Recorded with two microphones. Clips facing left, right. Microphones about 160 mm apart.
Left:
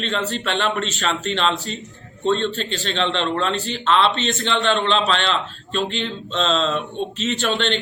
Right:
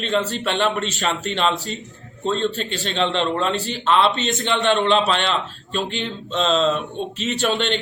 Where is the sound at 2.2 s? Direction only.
5° right (ahead or behind).